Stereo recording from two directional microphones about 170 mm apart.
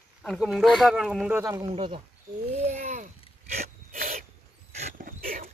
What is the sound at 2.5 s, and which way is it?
Sneeze, 40° right (ahead or behind).